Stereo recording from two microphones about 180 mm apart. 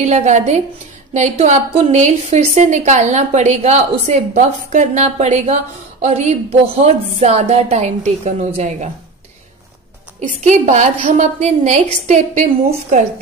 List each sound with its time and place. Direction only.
0.0 s a woman's voice: 40° right (ahead or behind)
10.6 s a woman's voice: 45° right (ahead or behind)